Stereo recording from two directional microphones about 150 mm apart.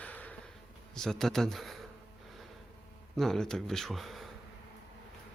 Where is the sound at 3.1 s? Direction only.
Centre (ahead or behind).